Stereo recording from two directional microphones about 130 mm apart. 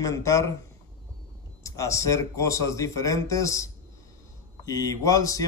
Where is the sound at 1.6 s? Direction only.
25° left (ahead or behind).